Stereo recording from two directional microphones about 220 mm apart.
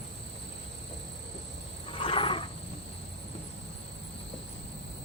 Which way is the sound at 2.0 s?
25° left (ahead or behind).